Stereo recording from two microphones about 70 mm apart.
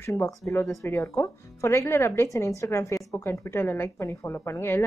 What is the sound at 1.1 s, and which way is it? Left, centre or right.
A woman's voice, left.